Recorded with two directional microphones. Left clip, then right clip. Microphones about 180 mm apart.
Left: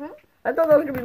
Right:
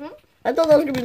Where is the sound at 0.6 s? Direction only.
30° right (ahead or behind).